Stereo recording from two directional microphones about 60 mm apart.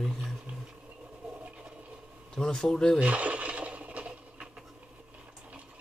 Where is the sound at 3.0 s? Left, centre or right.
Right.